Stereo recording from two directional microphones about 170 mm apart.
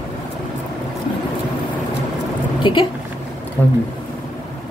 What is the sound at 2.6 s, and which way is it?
Speech, 25° left (ahead or behind).